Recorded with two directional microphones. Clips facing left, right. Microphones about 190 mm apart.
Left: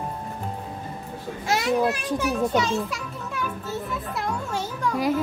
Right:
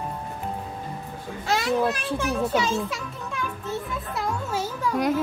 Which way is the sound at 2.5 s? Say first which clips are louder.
Left 1 dB; 5° right (ahead or behind).